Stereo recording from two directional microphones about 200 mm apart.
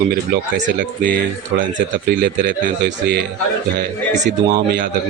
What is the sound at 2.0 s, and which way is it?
Speech, 60° right (ahead or behind).